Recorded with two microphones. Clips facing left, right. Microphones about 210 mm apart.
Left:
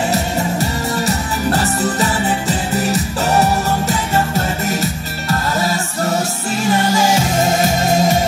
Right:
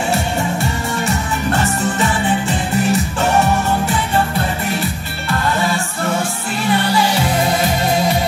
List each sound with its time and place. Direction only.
0.1 s music: 40° left (ahead or behind)
5.3 s music: 40° left (ahead or behind)